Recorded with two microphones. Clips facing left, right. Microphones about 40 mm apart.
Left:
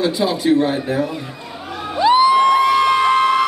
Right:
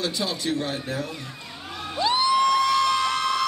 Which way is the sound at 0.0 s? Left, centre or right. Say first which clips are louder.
Left 10 dB; left.